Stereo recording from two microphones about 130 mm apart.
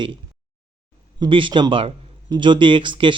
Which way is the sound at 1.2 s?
40° right (ahead or behind).